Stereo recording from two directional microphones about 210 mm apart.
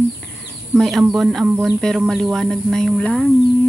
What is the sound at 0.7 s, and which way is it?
Speech, centre (ahead or behind).